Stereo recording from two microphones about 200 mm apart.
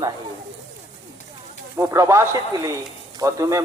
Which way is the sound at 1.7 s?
15° right (ahead or behind).